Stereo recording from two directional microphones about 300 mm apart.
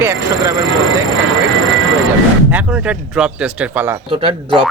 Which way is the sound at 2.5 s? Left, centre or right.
Centre.